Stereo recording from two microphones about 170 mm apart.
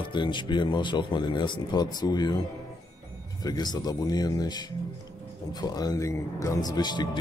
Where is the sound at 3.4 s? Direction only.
25° left (ahead or behind).